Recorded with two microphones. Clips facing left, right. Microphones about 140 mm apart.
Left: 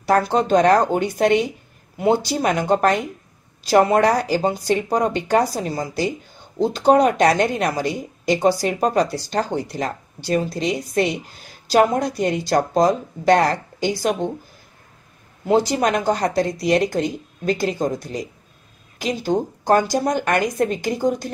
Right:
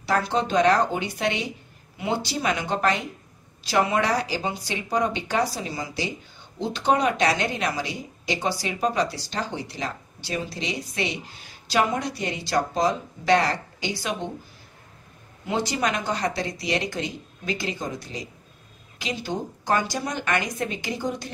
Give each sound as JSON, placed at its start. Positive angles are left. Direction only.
{"t": 0.0, "sound": "speech", "side_deg": 45}
{"t": 15.4, "sound": "speech", "side_deg": 45}